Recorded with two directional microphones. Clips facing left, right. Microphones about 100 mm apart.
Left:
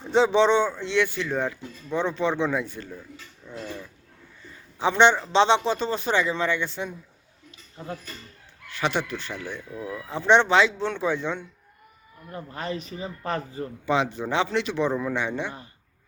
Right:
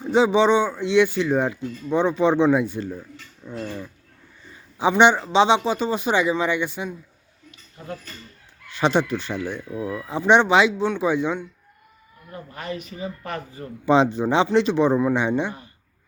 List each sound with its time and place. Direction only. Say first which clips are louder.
0.0 s a man's voice: right 2 dB; 5° right (ahead or behind)
4.8 s a man's voice: right 3 dB; 10° right (ahead or behind)
8.7 s speech: right 6 dB; 30° right (ahead or behind)
9.1 s a man's voice: right 6 dB; 20° right (ahead or behind)
12.3 s speech: even; 30° left (ahead or behind)
13.8 s speech: right 7 dB; 25° right (ahead or behind)